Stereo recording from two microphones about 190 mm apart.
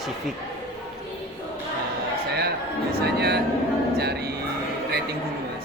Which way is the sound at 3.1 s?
60° right (ahead or behind).